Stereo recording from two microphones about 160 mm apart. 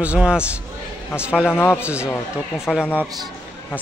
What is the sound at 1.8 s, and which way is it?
Speech, 10° right (ahead or behind).